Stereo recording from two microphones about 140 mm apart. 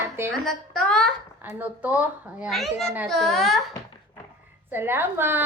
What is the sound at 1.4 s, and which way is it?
A woman's voice, 15° right (ahead or behind).